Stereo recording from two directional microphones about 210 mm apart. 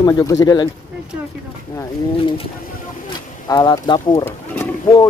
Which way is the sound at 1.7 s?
25° left (ahead or behind).